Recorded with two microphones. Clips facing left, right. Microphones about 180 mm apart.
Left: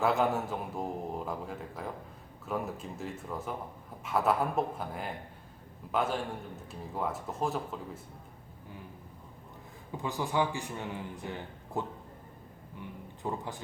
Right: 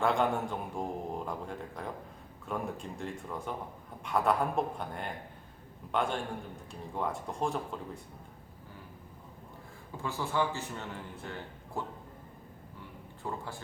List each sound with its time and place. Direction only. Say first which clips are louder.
0.0 s a man's voice: left 1 dB; 5° left (ahead or behind)
10.0 s a man's voice: left 1 dB; 15° left (ahead or behind)
13.2 s a man's voice: left 3 dB; 20° left (ahead or behind)